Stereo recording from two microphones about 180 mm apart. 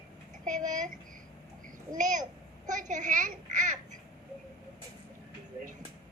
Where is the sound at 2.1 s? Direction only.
45° right (ahead or behind).